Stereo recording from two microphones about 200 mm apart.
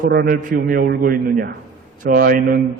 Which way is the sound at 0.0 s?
50° right (ahead or behind).